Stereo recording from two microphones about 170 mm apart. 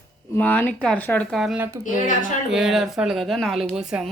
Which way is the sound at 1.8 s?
50° left (ahead or behind).